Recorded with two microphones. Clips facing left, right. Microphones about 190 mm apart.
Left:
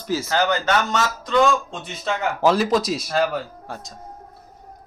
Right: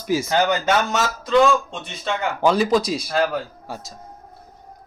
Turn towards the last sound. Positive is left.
turn(degrees=0)  # may be behind; listen again after turning